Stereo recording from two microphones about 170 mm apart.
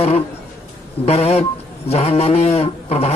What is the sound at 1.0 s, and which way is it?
A man's voice, 40° left (ahead or behind).